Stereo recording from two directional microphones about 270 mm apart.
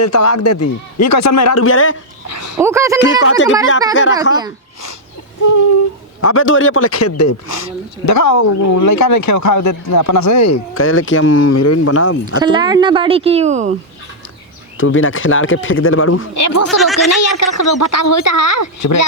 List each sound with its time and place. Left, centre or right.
0.0 s speech: left
1.6 s speech: left
2.3 s a sound: left
2.6 s speech: centre
3.0 s speech: left
6.2 s speech: left
11.3 s speech: left
12.4 s speech: centre
14.8 s speech: left
16.3 s speech: left
16.6 s speech: centre
17.1 s speech: left